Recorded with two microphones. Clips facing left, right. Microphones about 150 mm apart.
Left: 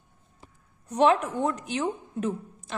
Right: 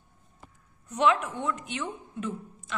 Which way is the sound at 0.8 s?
35° left (ahead or behind).